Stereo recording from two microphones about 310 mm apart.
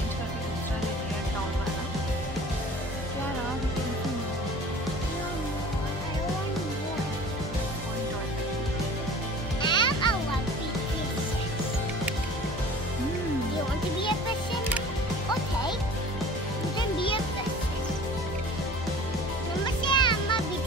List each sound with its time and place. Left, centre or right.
9.6 s music: centre
19.8 s music: centre